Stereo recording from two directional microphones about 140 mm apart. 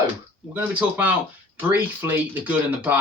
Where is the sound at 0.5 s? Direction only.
10° right (ahead or behind).